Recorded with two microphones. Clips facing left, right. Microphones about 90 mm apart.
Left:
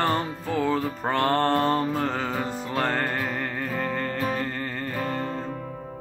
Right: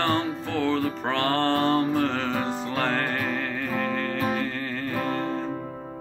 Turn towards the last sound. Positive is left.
turn(degrees=0)  # may be behind; listen again after turning